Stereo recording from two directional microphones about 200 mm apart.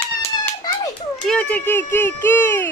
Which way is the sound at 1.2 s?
5° left (ahead or behind).